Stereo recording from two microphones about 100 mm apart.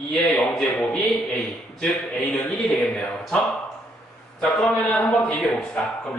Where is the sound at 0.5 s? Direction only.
10° left (ahead or behind).